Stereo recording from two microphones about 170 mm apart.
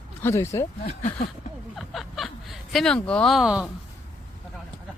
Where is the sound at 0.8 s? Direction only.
45° left (ahead or behind).